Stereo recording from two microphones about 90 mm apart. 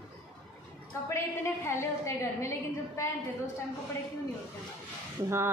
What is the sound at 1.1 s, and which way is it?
A woman's voice, 30° left (ahead or behind).